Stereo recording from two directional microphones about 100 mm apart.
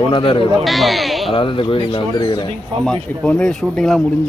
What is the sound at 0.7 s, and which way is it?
Speech, centre (ahead or behind).